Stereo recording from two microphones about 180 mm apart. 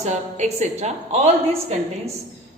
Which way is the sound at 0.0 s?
40° right (ahead or behind).